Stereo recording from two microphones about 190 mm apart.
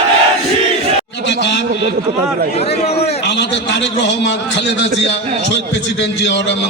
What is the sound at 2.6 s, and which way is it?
Speech, 35° left (ahead or behind).